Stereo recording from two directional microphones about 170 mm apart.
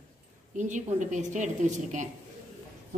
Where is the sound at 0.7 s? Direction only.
45° right (ahead or behind).